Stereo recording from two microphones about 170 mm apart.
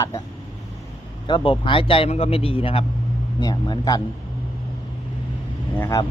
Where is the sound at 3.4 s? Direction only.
20° left (ahead or behind).